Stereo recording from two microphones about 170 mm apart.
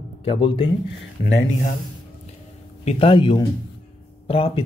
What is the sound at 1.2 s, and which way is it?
Speech, 90° left.